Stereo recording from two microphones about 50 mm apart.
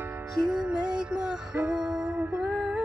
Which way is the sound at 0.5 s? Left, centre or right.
Centre.